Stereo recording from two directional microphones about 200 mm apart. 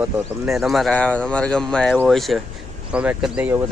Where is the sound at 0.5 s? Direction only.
Centre (ahead or behind).